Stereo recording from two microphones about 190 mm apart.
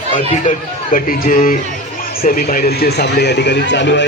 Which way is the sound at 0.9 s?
45° left (ahead or behind).